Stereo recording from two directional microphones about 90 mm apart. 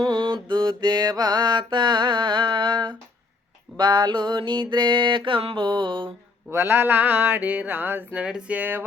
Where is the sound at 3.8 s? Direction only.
55° right (ahead or behind).